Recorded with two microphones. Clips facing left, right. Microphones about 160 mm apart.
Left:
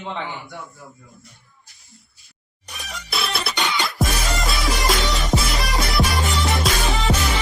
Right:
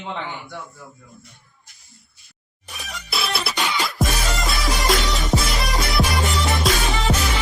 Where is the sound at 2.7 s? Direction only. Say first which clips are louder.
Even; centre (ahead or behind).